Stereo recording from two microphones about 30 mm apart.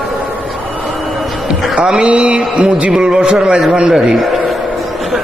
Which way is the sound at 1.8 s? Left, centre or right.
Right.